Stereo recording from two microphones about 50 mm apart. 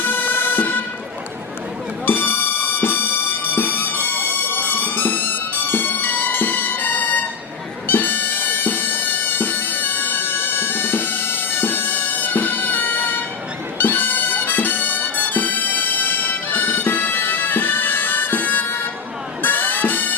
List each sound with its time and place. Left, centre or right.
0.0 s music: left
2.0 s music: left